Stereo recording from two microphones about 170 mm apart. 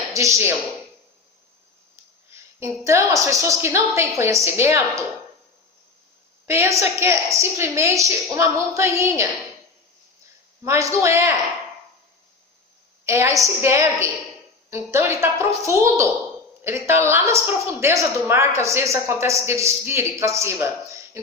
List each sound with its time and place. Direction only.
0.1 s speech: 15° right (ahead or behind)
2.3 s a woman's voice: 15° right (ahead or behind)
6.4 s a woman's voice: 15° right (ahead or behind)
10.7 s a woman's voice: 15° right (ahead or behind)
13.1 s a woman's voice: 15° right (ahead or behind)